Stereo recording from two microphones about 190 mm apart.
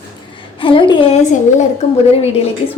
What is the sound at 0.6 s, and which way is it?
A woman's voice, 25° left (ahead or behind).